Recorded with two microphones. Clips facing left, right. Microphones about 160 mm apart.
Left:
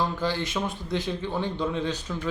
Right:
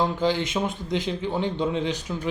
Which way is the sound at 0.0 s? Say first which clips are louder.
Right 4 dB; 20° right (ahead or behind).